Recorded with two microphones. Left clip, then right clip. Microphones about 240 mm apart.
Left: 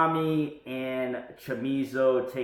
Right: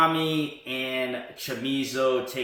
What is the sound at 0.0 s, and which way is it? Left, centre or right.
Speech, right.